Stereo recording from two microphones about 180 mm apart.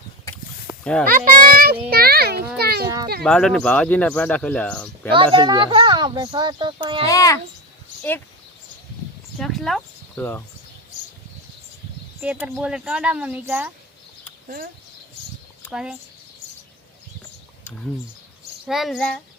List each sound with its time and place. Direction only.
0.3 s a sound: 15° left (ahead or behind)
1.0 s a child's voice: 50° right (ahead or behind)
3.2 s speech: 5° left (ahead or behind)
5.1 s speech: 25° right (ahead or behind)
7.1 s speech: 20° left (ahead or behind)
9.4 s speech: centre (ahead or behind)
10.2 s speech: 10° left (ahead or behind)
12.2 s speech: 5° right (ahead or behind)
15.7 s speech: 5° right (ahead or behind)
18.7 s speech: centre (ahead or behind)